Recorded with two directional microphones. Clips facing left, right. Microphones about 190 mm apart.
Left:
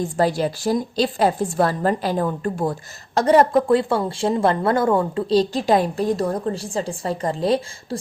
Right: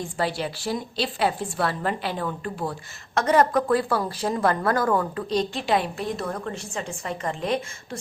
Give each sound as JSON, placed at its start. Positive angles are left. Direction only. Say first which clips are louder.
{"t": 0.2, "sound": "a woman's voice", "louder": "left 7 dB", "side_deg": 40}
{"t": 3.2, "sound": "a woman's voice", "louder": "left 5 dB", "side_deg": 30}